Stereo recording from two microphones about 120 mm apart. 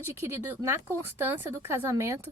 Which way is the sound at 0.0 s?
20° right (ahead or behind).